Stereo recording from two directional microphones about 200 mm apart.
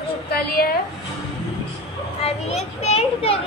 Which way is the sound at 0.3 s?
50° left (ahead or behind).